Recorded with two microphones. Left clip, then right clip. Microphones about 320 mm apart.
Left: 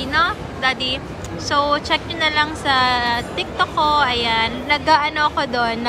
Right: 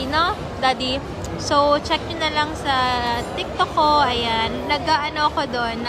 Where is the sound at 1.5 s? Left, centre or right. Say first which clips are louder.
Even; centre.